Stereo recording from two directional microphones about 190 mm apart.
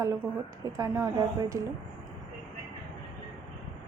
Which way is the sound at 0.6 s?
15° right (ahead or behind).